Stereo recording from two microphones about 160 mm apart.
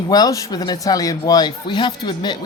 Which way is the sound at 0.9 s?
25° left (ahead or behind).